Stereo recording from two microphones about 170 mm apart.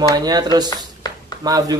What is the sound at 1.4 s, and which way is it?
Speech, 20° right (ahead or behind).